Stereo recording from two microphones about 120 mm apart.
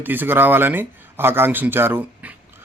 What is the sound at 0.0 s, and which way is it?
A man's voice, 15° right (ahead or behind).